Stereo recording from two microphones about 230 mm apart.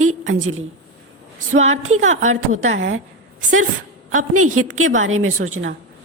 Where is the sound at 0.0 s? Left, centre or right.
Right.